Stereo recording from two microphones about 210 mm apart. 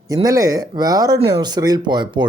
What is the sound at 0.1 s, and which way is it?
Speech, 15° right (ahead or behind).